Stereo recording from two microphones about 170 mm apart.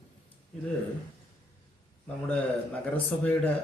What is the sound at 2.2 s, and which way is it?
A man's voice, 10° left (ahead or behind).